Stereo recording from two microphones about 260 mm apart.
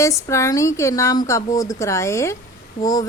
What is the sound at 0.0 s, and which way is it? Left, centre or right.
A woman's voice, centre.